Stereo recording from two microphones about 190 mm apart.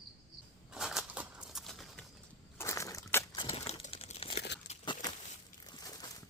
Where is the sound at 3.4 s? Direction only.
30° left (ahead or behind).